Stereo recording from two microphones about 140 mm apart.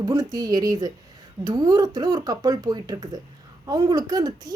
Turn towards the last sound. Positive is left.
turn(degrees=-25)  # may be behind; listen again after turning